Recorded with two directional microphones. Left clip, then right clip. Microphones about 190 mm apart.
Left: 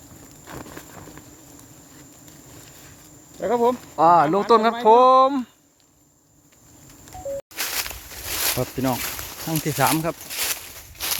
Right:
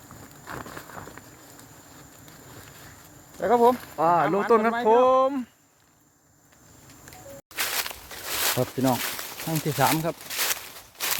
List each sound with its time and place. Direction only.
0.4 s a sound: 5° left (ahead or behind)
3.4 s speech: 5° right (ahead or behind)
3.9 s speech: 15° left (ahead or behind)
7.5 s a sound: centre (ahead or behind)
9.4 s speech: 5° right (ahead or behind)
10.3 s walk: 10° right (ahead or behind)